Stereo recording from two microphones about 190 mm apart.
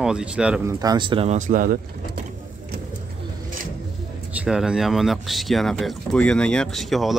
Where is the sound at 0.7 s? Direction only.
20° right (ahead or behind); by 2.2 s 50° right (ahead or behind).